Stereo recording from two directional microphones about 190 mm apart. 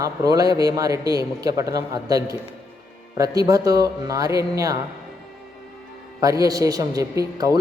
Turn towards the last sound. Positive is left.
turn(degrees=-20)  # may be behind; listen again after turning